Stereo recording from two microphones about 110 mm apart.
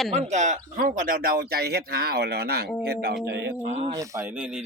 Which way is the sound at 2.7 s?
Centre (ahead or behind).